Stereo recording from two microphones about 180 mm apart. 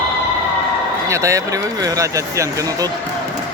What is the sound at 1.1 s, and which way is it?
Speech, 15° right (ahead or behind).